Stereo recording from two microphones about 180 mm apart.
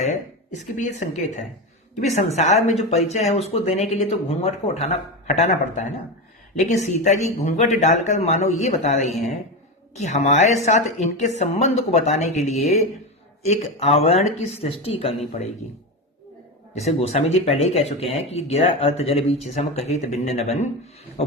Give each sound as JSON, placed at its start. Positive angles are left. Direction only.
{"t": 0.5, "sound": "speech", "side_deg": 40}
{"t": 16.7, "sound": "speech", "side_deg": 40}